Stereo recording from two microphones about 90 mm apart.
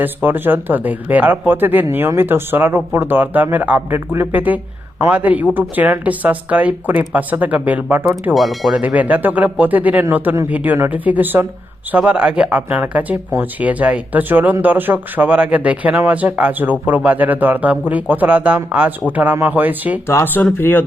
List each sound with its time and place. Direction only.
0.0 s speech: 20° right (ahead or behind)
8.3 s speech: centre (ahead or behind)
8.7 s speech: 15° right (ahead or behind)
20.1 s speech: 25° left (ahead or behind)